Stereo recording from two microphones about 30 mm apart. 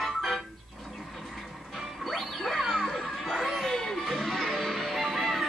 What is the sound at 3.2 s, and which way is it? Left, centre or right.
Chatter, centre.